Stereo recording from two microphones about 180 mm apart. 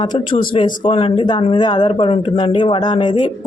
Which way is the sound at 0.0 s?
25° left (ahead or behind).